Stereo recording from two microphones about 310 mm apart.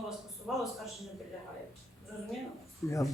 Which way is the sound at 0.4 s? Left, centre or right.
Centre.